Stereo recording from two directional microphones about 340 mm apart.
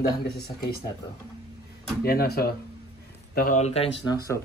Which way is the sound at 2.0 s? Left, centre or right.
Left.